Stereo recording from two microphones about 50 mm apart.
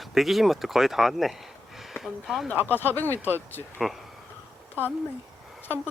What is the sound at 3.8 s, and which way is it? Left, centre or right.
Speech, centre.